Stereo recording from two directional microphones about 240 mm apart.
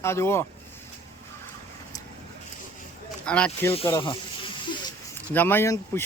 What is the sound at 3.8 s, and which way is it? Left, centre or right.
Snake, centre.